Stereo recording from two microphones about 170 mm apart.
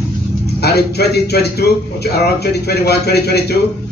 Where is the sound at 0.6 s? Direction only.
70° left (ahead or behind).